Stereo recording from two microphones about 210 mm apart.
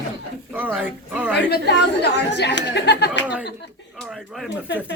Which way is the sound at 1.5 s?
55° left (ahead or behind).